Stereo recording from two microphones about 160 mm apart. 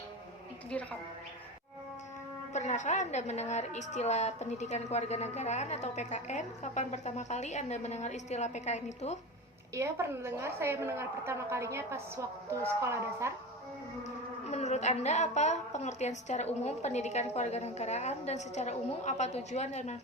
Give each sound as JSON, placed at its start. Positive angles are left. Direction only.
{"t": 0.7, "sound": "a woman's voice", "side_deg": 10}
{"t": 2.5, "sound": "a woman's voice", "side_deg": 45}
{"t": 9.7, "sound": "a woman's voice", "side_deg": -15}
{"t": 14.4, "sound": "a woman's voice", "side_deg": 45}